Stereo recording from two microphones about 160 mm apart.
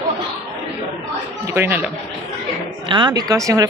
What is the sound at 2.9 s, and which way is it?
Speech, 30° right (ahead or behind).